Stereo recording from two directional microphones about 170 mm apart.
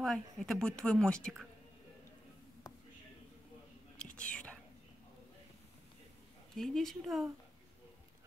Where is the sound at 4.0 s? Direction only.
5° left (ahead or behind).